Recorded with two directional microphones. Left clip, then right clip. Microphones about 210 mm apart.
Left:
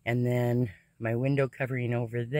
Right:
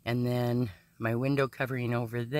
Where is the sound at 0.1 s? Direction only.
15° right (ahead or behind).